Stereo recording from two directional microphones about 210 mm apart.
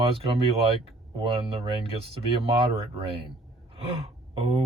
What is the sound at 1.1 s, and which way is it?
Speech, 25° right (ahead or behind).